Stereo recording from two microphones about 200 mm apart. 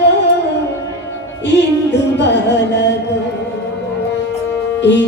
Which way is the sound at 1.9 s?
60° left (ahead or behind).